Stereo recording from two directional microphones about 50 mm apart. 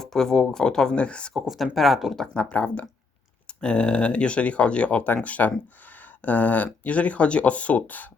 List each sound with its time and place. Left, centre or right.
0.0 s speech: centre
1.3 s speech: centre
2.1 s speech: centre; by 8.1 s left